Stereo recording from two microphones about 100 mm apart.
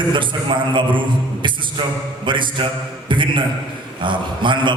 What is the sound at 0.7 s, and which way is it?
A man's voice, 55° right (ahead or behind).